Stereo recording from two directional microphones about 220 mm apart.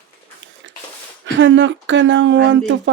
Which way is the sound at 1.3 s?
55° right (ahead or behind).